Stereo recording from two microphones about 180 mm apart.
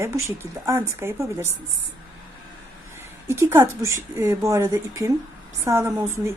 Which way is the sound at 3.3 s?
15° right (ahead or behind).